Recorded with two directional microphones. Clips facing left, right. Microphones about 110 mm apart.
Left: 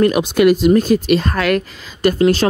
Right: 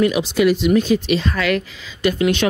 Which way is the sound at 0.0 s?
50° left (ahead or behind).